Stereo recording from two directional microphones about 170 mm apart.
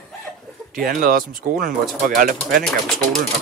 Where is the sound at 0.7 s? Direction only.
60° right (ahead or behind).